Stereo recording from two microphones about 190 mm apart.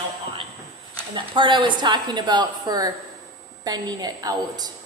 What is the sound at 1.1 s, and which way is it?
A woman's voice, 25° right (ahead or behind).